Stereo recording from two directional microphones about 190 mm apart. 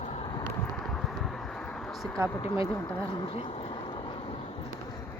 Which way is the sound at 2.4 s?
25° left (ahead or behind).